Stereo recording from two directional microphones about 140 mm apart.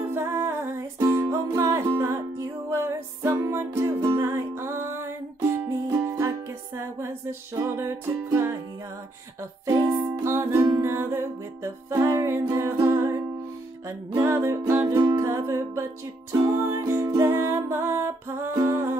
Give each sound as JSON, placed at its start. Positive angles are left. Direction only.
{"t": 0.1, "sound": "music", "side_deg": -15}
{"t": 7.5, "sound": "music", "side_deg": -20}
{"t": 9.7, "sound": "music", "side_deg": -20}
{"t": 10.5, "sound": "music", "side_deg": -35}
{"t": 10.8, "sound": "music", "side_deg": -20}